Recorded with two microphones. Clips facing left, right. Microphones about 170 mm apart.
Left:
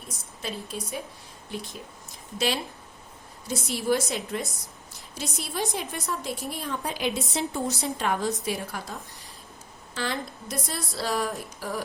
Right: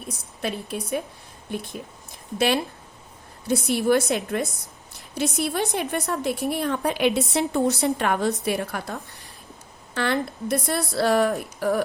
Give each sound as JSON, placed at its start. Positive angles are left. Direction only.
{"t": 0.1, "sound": "a woman's voice", "side_deg": -65}
{"t": 3.4, "sound": "a woman's voice", "side_deg": -60}